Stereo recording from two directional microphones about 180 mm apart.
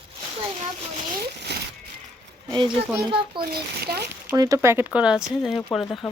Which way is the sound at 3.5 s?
60° right (ahead or behind).